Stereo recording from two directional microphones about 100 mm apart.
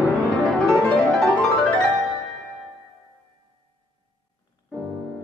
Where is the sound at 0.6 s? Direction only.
5° left (ahead or behind).